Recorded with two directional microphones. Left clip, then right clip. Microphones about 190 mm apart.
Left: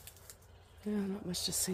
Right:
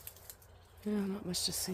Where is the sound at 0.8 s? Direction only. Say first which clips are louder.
Right 1 dB; 5° right (ahead or behind).